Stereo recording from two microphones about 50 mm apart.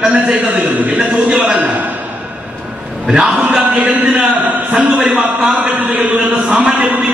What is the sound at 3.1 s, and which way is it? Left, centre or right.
Speech, centre.